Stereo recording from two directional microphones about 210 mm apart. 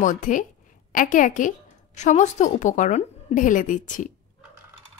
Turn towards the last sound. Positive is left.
turn(degrees=35)  # may be behind; listen again after turning